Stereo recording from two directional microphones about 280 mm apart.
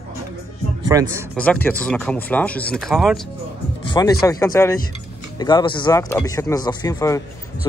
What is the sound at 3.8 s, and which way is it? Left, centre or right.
Speech, centre.